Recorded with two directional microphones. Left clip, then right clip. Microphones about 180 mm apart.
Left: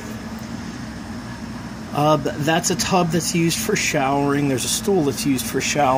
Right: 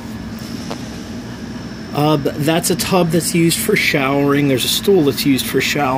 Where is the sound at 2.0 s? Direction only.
5° right (ahead or behind).